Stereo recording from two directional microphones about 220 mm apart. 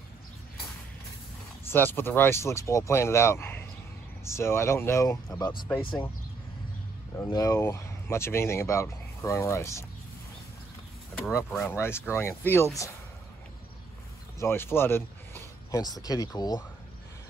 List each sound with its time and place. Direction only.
1.7 s speech: 10° left (ahead or behind)
7.2 s speech: 15° left (ahead or behind)
11.2 s speech: centre (ahead or behind)
11.7 s speech: 10° left (ahead or behind)
14.4 s speech: 10° left (ahead or behind)